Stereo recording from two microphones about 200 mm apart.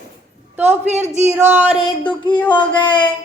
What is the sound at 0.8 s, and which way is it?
Speech, 35° right (ahead or behind).